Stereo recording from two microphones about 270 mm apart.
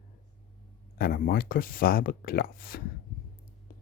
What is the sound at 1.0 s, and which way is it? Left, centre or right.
Speech, left.